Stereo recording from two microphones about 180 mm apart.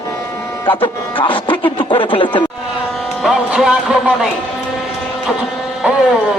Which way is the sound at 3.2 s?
5° right (ahead or behind).